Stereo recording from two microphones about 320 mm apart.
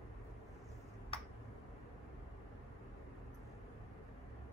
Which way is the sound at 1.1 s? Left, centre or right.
Centre.